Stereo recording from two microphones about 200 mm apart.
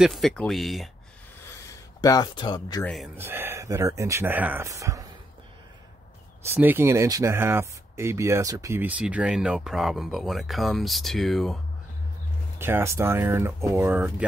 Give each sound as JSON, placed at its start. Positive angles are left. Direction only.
{"t": 0.0, "sound": "speech", "side_deg": 0}
{"t": 1.5, "sound": "a sound", "side_deg": 20}
{"t": 2.8, "sound": "speech", "side_deg": 0}
{"t": 3.2, "sound": "speech", "side_deg": -10}
{"t": 6.4, "sound": "speech", "side_deg": -10}
{"t": 12.5, "sound": "speech", "side_deg": -10}